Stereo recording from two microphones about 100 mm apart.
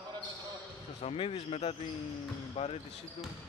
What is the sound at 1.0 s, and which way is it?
Speech, 80° left.